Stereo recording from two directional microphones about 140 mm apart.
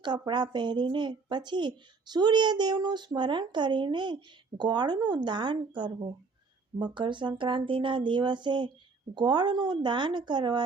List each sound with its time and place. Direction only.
0.0 s a woman's voice: 30° right (ahead or behind)